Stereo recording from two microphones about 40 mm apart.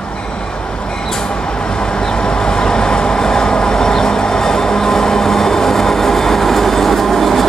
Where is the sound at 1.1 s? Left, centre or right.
Left.